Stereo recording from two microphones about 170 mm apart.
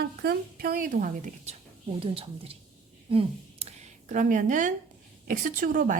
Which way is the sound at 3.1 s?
35° right (ahead or behind).